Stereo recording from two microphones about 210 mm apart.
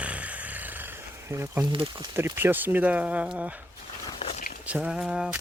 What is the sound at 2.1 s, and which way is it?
Speech, 10° right (ahead or behind).